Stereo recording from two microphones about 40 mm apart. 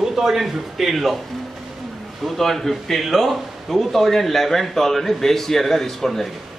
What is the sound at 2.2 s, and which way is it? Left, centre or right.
A man's voice, centre.